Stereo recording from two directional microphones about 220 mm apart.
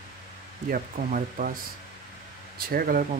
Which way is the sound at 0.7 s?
40° right (ahead or behind).